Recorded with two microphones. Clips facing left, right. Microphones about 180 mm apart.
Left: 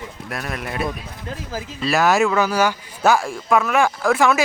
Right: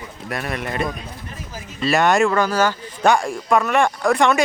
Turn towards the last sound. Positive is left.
turn(degrees=0)  # may be behind; listen again after turning